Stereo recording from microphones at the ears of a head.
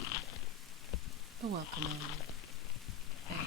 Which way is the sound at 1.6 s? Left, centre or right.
Left.